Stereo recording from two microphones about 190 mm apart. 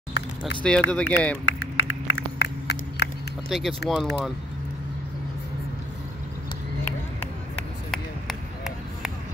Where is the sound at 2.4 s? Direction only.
60° left (ahead or behind).